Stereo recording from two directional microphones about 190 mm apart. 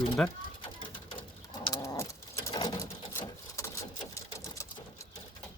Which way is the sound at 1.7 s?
20° left (ahead or behind).